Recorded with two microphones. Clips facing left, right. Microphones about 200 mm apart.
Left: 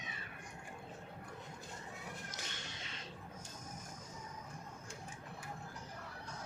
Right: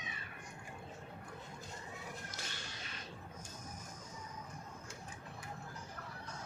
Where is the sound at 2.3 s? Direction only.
20° left (ahead or behind).